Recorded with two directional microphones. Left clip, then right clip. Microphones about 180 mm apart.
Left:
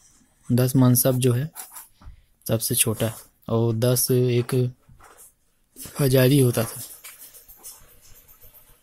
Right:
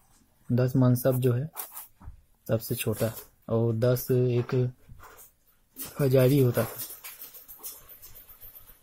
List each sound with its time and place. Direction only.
0.5 s speech: 30° left (ahead or behind)
2.5 s speech: 30° left (ahead or behind)
5.9 s speech: 25° left (ahead or behind)